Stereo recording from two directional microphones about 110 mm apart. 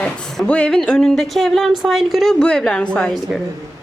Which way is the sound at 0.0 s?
10° left (ahead or behind).